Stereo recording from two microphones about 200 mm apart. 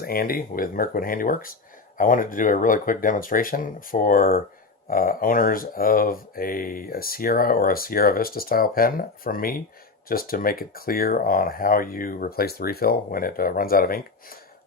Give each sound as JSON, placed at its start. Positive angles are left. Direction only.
{"t": 0.0, "sound": "speech", "side_deg": 50}